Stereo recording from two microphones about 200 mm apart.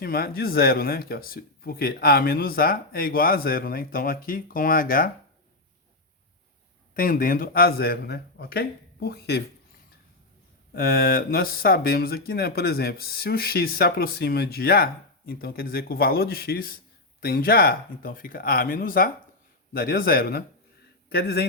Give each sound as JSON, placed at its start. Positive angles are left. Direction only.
{"t": 0.0, "sound": "speech", "side_deg": 50}
{"t": 6.9, "sound": "speech", "side_deg": 45}
{"t": 10.8, "sound": "speech", "side_deg": 45}